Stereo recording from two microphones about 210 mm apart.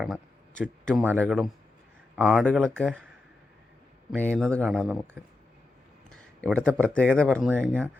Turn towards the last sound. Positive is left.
turn(degrees=5)  # may be behind; listen again after turning